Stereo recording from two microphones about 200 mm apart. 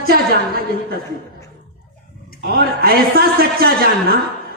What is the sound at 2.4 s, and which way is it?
A woman's voice, 50° right (ahead or behind).